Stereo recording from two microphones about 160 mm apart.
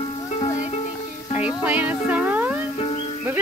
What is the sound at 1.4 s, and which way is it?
Music, 10° right (ahead or behind).